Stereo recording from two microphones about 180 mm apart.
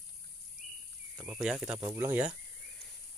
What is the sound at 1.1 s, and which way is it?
Speech, 10° right (ahead or behind).